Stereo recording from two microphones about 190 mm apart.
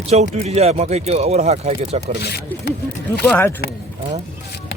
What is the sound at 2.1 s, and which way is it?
Speech, 60° left (ahead or behind).